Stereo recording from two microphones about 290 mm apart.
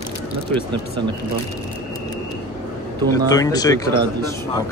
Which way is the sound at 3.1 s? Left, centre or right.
Centre.